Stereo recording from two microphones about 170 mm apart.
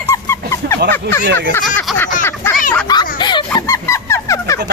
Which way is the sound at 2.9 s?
25° left (ahead or behind).